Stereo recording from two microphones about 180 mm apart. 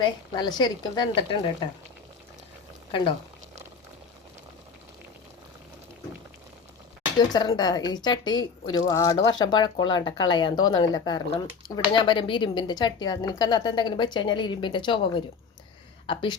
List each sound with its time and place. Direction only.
0.0 s speech: 25° left (ahead or behind)
2.9 s speech: 30° left (ahead or behind)
7.2 s speech: 25° left (ahead or behind)